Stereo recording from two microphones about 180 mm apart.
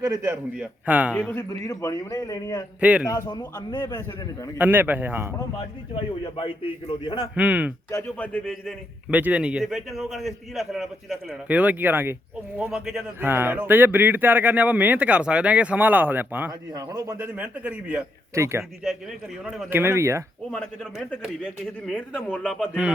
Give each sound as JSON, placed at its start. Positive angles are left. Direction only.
{"t": 0.0, "sound": "a man's voice", "side_deg": -20}
{"t": 0.5, "sound": "a man's voice", "side_deg": -5}
{"t": 1.1, "sound": "a man's voice", "side_deg": 10}
{"t": 4.5, "sound": "a man's voice", "side_deg": -10}
{"t": 6.2, "sound": "a man's voice", "side_deg": 30}
{"t": 7.3, "sound": "a man's voice", "side_deg": -5}
{"t": 7.9, "sound": "a man's voice", "side_deg": 15}
{"t": 9.0, "sound": "a man's voice", "side_deg": -10}
{"t": 18.8, "sound": "a man's voice", "side_deg": 0}
{"t": 19.7, "sound": "a man's voice", "side_deg": -15}
{"t": 20.5, "sound": "a man's voice", "side_deg": 5}